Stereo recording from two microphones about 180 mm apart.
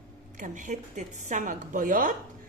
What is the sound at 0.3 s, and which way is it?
A woman's voice, 45° right (ahead or behind).